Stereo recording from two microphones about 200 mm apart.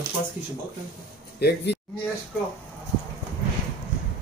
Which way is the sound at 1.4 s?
55° left (ahead or behind).